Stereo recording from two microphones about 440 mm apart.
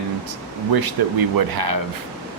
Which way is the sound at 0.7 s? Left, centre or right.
Right.